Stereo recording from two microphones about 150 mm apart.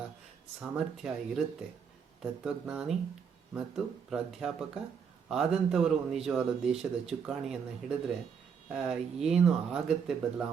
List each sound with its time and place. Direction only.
0.6 s a man's voice: 5° right (ahead or behind)